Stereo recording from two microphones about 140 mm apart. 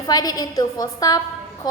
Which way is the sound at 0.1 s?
30° left (ahead or behind).